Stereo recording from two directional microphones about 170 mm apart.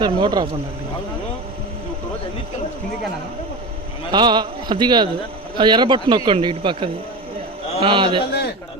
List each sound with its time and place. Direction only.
0.0 s speech: 25° right (ahead or behind)
4.1 s a man's voice: 25° right (ahead or behind)
8.2 s speech: 70° left (ahead or behind)